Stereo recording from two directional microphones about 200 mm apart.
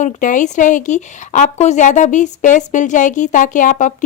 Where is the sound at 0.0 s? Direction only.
40° left (ahead or behind).